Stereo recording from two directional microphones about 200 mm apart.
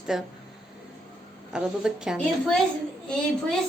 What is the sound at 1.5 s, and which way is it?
Speech, 5° right (ahead or behind).